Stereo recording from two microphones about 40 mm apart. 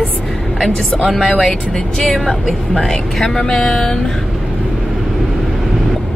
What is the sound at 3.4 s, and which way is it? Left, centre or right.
Speech, centre.